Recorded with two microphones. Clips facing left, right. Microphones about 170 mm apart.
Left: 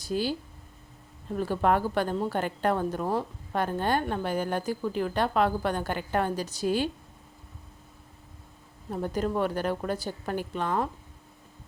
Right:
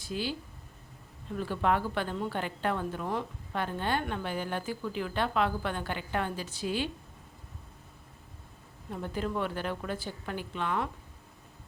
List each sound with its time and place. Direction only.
0.0 s a woman's voice: 40° left (ahead or behind)
8.9 s a woman's voice: 40° left (ahead or behind)